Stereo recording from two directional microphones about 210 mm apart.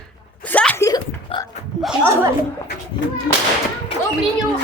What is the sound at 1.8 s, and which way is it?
Speech, 10° right (ahead or behind).